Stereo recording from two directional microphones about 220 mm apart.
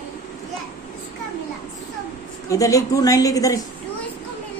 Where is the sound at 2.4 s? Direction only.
15° left (ahead or behind).